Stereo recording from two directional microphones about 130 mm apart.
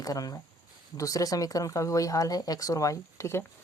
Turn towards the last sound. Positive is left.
turn(degrees=20)  # may be behind; listen again after turning